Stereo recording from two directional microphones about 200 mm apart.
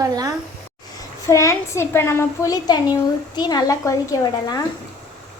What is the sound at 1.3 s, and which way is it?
A woman's voice, 15° left (ahead or behind).